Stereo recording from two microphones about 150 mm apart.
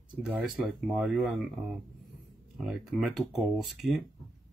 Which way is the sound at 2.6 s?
5° right (ahead or behind).